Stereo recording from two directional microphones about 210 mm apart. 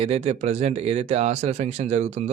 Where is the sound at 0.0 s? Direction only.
30° right (ahead or behind).